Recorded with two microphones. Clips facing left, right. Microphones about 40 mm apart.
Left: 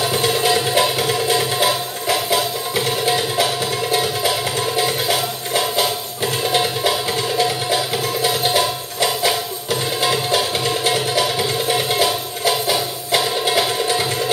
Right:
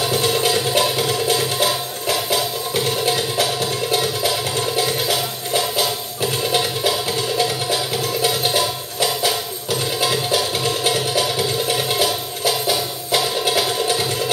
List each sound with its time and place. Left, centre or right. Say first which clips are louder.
0.5 s music: left 2 dB; left